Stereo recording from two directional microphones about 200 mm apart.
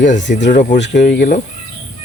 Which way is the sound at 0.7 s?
60° left (ahead or behind).